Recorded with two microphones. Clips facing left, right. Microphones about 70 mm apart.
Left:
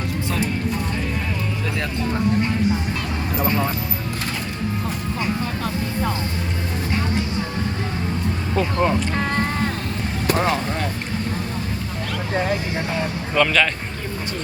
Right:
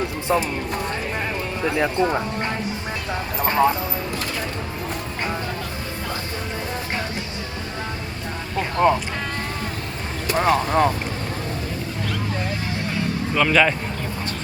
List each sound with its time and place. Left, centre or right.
8.5 s speech: centre
10.3 s speech: centre
13.3 s speech: centre